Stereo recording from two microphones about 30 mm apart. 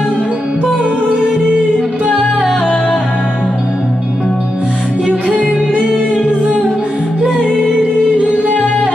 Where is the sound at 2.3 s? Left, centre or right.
Centre.